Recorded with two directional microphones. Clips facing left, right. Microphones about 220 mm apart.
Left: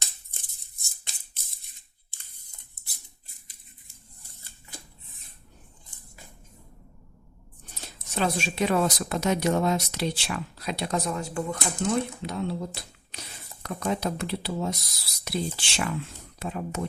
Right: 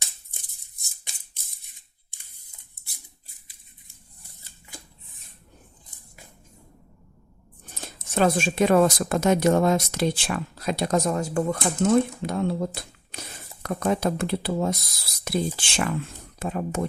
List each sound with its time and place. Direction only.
2.0 s camera: 10° right (ahead or behind)
7.9 s speech: 50° right (ahead or behind)